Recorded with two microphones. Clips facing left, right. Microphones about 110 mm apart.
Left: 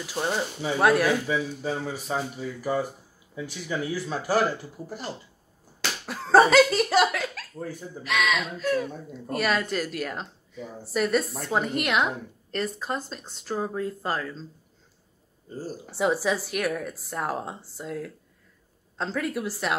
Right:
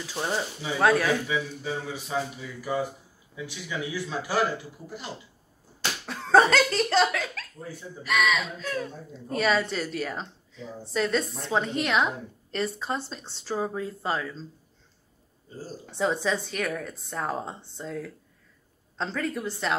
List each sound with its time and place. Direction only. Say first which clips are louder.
0.0 s a woman's voice: left 2 dB; 10° left (ahead or behind)
1.2 s speech: left 2 dB; 45° left (ahead or behind)
6.0 s laughter: left 2 dB; 5° left (ahead or behind)
8.0 s speech: right 1 dB; centre (ahead or behind)
16.0 s a woman's voice: left 2 dB; 10° left (ahead or behind)